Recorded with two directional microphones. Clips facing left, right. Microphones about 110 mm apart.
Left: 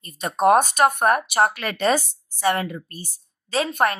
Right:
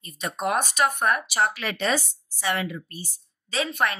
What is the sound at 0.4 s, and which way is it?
A woman's voice, 45° left (ahead or behind).